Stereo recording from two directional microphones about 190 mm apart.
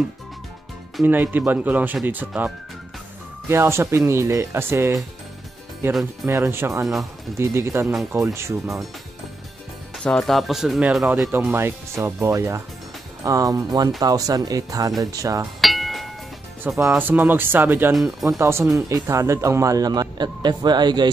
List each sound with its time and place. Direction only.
0.9 s speech: 10° right (ahead or behind)
6.2 s speech: 10° right (ahead or behind)
10.0 s speech: 5° left (ahead or behind); by 15.4 s 20° right (ahead or behind)
15.6 s music: centre (ahead or behind)
16.6 s speech: 10° right (ahead or behind)